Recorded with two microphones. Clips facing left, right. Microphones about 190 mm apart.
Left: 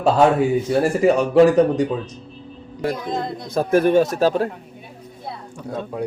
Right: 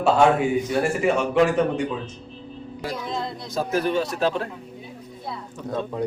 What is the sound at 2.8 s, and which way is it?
Speech, 50° left (ahead or behind).